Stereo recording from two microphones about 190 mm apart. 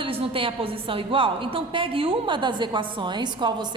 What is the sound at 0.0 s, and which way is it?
A woman's voice, 30° right (ahead or behind).